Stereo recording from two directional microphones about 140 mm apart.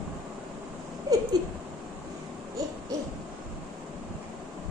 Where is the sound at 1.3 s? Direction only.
30° right (ahead or behind).